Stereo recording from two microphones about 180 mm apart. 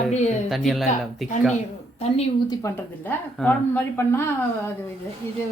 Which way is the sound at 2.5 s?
20° left (ahead or behind).